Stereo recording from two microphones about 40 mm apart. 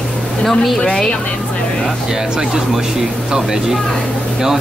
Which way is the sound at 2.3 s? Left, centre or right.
Centre.